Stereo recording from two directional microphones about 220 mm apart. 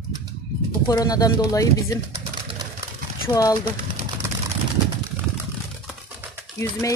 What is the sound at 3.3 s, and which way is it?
Speech, 15° left (ahead or behind).